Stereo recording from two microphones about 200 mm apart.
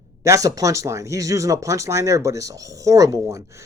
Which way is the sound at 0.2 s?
15° right (ahead or behind).